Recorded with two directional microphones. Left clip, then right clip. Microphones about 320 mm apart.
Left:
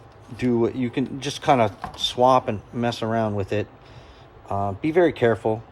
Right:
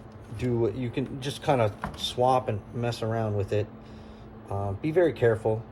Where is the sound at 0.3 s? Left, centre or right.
Left.